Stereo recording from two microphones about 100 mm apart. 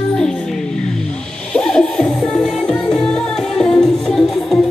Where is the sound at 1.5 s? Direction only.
5° left (ahead or behind).